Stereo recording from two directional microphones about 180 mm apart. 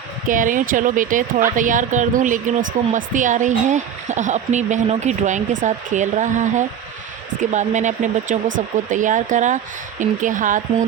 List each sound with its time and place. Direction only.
0.3 s speech: 45° right (ahead or behind)